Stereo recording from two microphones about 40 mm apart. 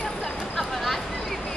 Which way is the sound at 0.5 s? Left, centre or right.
Centre.